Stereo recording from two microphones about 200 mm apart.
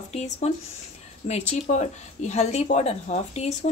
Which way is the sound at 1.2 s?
35° left (ahead or behind).